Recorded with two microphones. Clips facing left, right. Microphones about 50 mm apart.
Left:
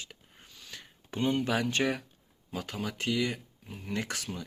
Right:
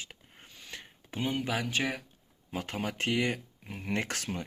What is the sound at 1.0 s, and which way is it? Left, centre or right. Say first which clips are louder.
Speech: left 3 dB; centre.